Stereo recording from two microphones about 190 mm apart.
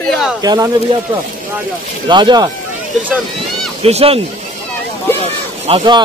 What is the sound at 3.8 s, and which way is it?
Speech, 35° right (ahead or behind).